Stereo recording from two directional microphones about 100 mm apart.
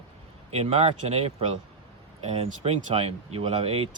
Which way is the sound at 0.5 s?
90° right.